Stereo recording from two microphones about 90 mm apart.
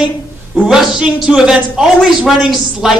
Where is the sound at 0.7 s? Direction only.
5° right (ahead or behind).